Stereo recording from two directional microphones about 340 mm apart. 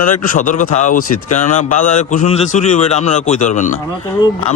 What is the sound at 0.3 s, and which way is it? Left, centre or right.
A man's voice, left.